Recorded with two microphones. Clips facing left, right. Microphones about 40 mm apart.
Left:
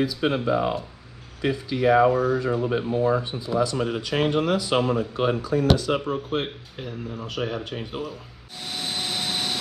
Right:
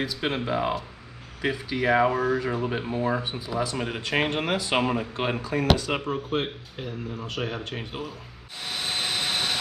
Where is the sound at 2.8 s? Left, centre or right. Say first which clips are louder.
Left 4 dB; right.